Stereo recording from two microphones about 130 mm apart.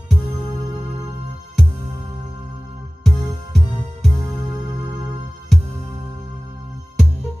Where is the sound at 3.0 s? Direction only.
Centre (ahead or behind).